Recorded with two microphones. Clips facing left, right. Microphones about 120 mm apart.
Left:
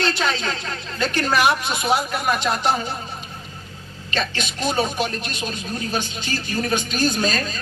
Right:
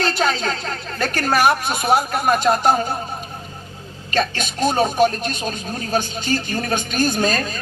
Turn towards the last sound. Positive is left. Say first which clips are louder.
# right 2 dB
turn(degrees=-45)  # may be behind; listen again after turning